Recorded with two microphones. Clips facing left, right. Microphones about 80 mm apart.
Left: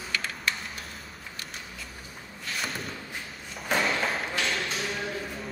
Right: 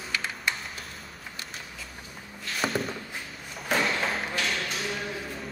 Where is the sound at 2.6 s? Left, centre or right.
Right.